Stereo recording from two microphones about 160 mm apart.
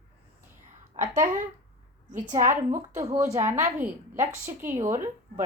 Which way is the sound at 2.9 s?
20° right (ahead or behind).